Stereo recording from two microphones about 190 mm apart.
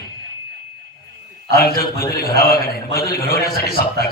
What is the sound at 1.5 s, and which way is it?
A man's voice, 55° left (ahead or behind).